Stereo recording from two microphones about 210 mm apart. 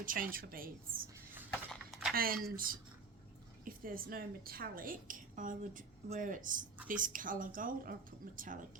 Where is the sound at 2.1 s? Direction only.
45° right (ahead or behind).